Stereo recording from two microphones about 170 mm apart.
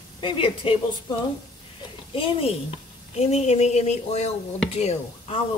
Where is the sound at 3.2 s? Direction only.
40° left (ahead or behind).